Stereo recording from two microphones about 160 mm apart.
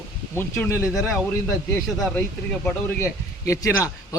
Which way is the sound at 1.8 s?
Centre (ahead or behind).